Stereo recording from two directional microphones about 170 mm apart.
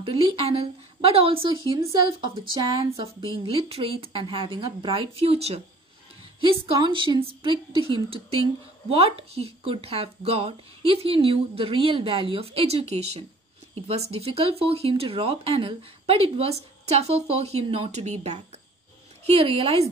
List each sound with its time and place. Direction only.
0.0 s a woman's voice: 35° right (ahead or behind)